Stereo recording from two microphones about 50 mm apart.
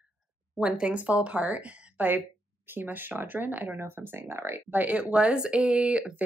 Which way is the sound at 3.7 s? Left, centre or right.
Right.